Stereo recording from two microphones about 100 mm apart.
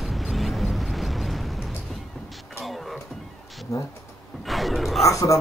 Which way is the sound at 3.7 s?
30° left (ahead or behind).